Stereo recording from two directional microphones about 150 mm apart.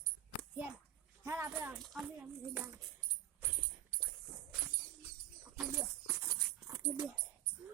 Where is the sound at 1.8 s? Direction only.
Centre (ahead or behind).